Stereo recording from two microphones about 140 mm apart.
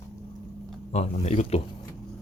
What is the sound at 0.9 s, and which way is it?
Speech, 55° left (ahead or behind).